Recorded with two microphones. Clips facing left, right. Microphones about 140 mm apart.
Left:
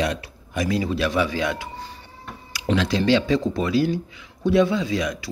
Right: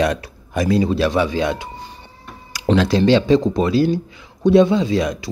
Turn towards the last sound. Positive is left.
turn(degrees=-30)  # may be behind; listen again after turning